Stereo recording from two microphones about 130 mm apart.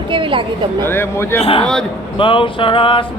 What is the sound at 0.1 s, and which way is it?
Speech, 40° right (ahead or behind).